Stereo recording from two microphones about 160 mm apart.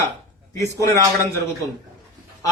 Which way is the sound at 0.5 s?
20° left (ahead or behind).